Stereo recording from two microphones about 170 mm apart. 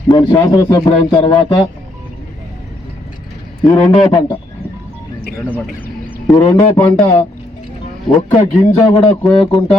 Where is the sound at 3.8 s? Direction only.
25° left (ahead or behind).